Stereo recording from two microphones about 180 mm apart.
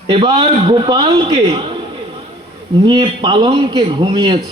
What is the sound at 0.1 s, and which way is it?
A man's voice, 30° right (ahead or behind).